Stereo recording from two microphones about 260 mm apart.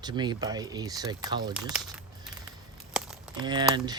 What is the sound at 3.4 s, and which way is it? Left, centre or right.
Speech, centre.